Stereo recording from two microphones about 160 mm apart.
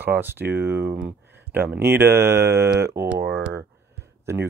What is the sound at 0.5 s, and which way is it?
Speech, 80° right.